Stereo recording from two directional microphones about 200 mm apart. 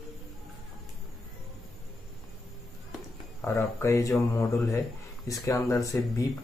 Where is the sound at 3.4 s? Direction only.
15° left (ahead or behind).